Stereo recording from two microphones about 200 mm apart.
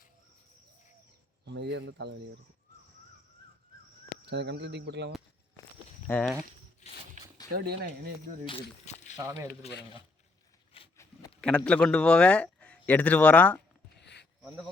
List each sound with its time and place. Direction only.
1.5 s speech: 60° right (ahead or behind)
4.3 s speech: 60° right (ahead or behind)
6.1 s speech: 10° left (ahead or behind)
7.5 s speech: 50° right (ahead or behind)
8.4 s a sound: 30° left (ahead or behind)
9.6 s speech: 30° left (ahead or behind)
11.3 s a man's voice: 5° left (ahead or behind)
14.0 s a sound: 60° left (ahead or behind)
14.4 s speech: 5° right (ahead or behind)